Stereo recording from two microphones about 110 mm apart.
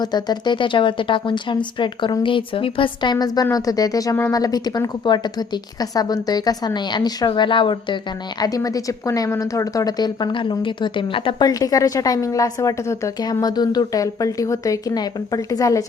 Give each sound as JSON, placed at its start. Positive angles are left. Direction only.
{"t": 0.0, "sound": "a woman's voice", "side_deg": 40}
{"t": 8.4, "sound": "a woman's voice", "side_deg": 35}
{"t": 11.4, "sound": "a woman's voice", "side_deg": 35}